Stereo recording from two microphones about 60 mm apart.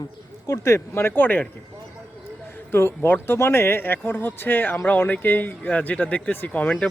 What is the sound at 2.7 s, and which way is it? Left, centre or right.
Speech, left.